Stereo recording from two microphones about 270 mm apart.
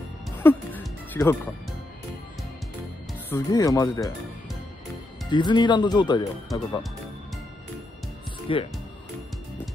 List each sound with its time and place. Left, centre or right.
0.4 s music: centre
3.3 s speech: centre
5.3 s speech: centre
8.5 s speech: centre